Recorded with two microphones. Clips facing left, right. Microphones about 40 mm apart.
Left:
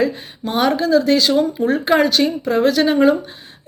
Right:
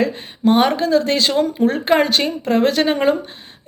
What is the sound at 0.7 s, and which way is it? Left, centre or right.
A woman's voice, right.